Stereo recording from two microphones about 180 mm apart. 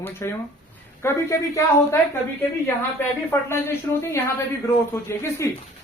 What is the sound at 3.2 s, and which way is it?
Speech, 15° left (ahead or behind).